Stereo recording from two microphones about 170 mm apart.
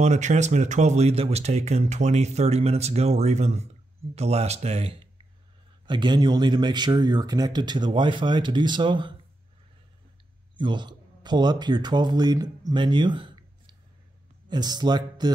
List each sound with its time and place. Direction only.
0.0 s speech: 45° right (ahead or behind); by 9.1 s 30° right (ahead or behind)
10.5 s a man's voice: 25° right (ahead or behind)